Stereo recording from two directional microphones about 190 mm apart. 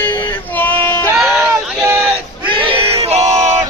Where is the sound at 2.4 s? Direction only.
25° right (ahead or behind).